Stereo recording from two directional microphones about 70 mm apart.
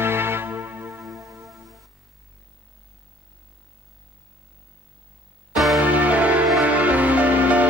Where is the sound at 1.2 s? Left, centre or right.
Right.